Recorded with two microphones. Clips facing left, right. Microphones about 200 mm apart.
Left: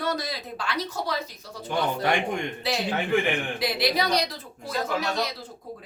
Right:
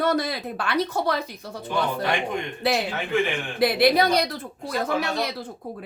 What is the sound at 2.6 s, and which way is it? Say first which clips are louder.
A woman's voice: right 1 dB; 55° right (ahead or behind).